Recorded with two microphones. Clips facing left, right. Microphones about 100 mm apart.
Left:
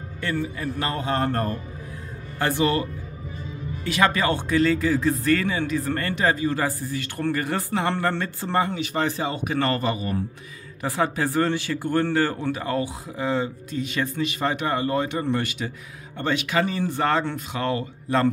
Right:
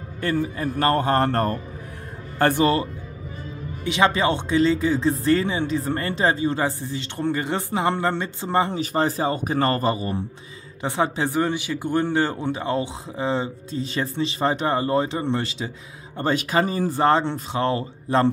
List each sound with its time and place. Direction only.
0.2 s speech: 35° right (ahead or behind)
0.8 s speech: 55° right (ahead or behind)
2.3 s speech: 50° right (ahead or behind)
3.8 s a man's voice: 20° right (ahead or behind)
8.7 s a man's voice: 35° right (ahead or behind)
16.2 s speech: 35° right (ahead or behind)